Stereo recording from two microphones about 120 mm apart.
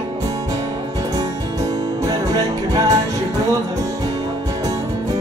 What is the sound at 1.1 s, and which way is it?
Music, 30° right (ahead or behind).